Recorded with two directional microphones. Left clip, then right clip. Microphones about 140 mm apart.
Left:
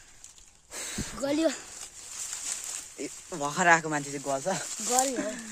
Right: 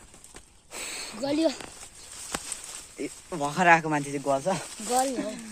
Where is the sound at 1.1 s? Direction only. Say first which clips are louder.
Right 1 dB; 50° left (ahead or behind).